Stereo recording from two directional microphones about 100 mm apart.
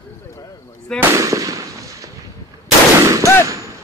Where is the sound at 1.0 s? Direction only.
30° right (ahead or behind).